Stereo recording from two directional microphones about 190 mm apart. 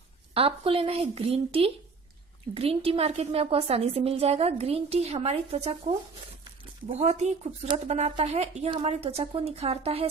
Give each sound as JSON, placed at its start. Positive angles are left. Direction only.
{"t": 0.3, "sound": "a woman's voice", "side_deg": -30}
{"t": 6.9, "sound": "a woman's voice", "side_deg": -35}